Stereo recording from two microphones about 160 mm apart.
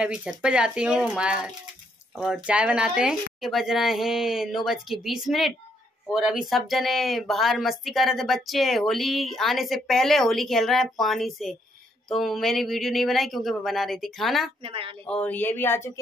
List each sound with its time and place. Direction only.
0.0 s speech: 5° right (ahead or behind)
14.6 s a woman's voice: 35° right (ahead or behind)
15.0 s speech: 10° left (ahead or behind)